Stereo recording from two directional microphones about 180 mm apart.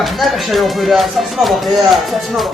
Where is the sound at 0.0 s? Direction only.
Centre (ahead or behind).